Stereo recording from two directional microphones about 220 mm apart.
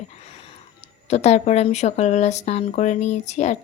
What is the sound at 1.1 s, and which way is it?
Speech, 30° left (ahead or behind).